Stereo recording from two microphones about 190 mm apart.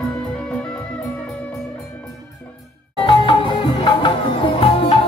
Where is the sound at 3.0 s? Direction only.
25° left (ahead or behind).